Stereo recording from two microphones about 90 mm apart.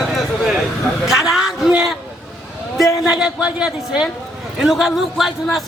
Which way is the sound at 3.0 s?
10° right (ahead or behind).